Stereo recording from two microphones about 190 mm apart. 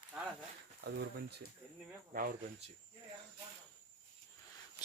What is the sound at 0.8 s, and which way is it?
Speech, 60° right (ahead or behind).